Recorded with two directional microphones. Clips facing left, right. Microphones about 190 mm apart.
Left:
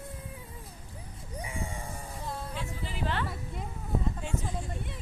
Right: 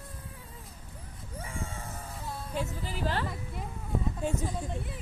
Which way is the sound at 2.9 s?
35° right (ahead or behind).